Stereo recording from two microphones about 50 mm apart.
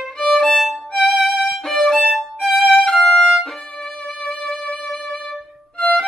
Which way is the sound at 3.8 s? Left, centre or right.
Left.